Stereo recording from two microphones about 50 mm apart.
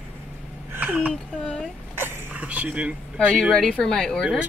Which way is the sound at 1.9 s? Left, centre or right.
Right.